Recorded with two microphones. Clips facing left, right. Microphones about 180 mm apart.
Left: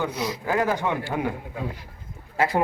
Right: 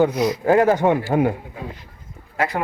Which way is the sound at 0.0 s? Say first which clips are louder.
Right 10 dB; 45° right (ahead or behind).